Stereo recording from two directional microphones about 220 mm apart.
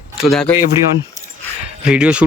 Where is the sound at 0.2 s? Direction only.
Centre (ahead or behind).